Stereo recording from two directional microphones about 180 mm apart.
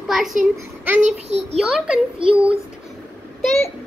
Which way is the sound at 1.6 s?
Centre (ahead or behind).